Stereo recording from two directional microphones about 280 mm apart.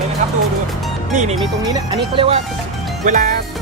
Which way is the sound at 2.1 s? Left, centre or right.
Centre.